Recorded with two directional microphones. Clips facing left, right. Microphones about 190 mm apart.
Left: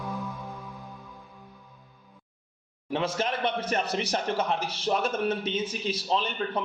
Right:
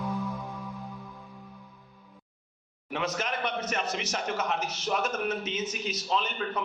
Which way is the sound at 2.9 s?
30° left (ahead or behind).